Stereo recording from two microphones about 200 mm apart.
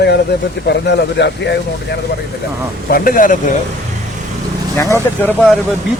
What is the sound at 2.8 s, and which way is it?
Speech, 45° left (ahead or behind).